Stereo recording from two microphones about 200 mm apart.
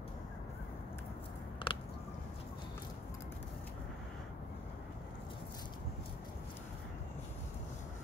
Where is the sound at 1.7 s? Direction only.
25° left (ahead or behind).